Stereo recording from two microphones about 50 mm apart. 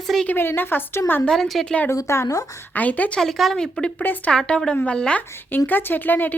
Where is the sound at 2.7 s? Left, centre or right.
Left.